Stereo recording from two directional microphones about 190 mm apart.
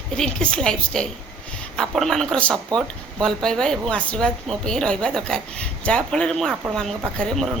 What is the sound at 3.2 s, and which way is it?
Speech, 5° left (ahead or behind).